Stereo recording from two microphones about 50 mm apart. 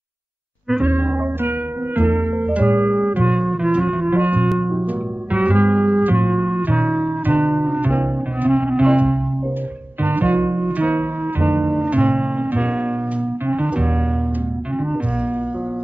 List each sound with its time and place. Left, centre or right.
0.8 s music: right
4.1 s music: right
10.0 s music: right
11.7 s music: right